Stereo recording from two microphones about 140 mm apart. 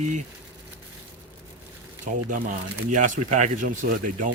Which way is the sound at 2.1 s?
65° right (ahead or behind).